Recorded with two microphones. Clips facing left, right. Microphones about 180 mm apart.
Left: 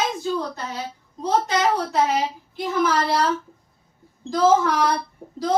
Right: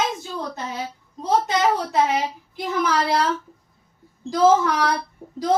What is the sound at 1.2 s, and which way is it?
Speech, 20° right (ahead or behind).